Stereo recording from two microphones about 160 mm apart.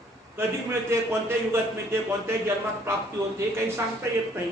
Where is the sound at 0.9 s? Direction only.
15° right (ahead or behind).